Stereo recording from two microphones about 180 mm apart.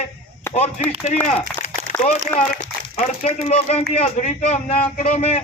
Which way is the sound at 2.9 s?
35° left (ahead or behind).